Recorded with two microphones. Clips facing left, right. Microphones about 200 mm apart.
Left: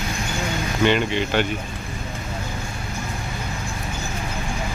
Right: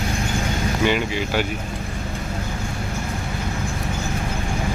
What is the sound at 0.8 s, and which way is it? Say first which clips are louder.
Speech: left 3 dB; 5° right (ahead or behind).